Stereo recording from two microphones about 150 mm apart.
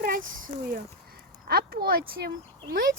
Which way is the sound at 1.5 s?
85° right.